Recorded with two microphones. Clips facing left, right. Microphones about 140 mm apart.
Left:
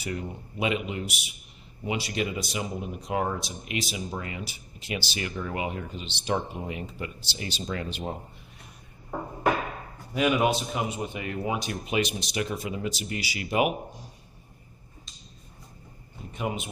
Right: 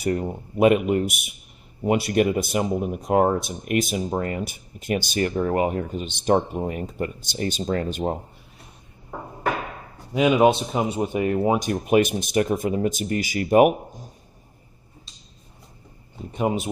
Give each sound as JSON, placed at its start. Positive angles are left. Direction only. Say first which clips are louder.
{"t": 0.0, "sound": "speech", "louder": "right 9 dB", "side_deg": -45}
{"t": 10.1, "sound": "speech", "louder": "right 7 dB", "side_deg": -20}
{"t": 10.7, "sound": "speech", "louder": "right 7 dB", "side_deg": -35}
{"t": 16.3, "sound": "speech", "louder": "right 8 dB", "side_deg": -35}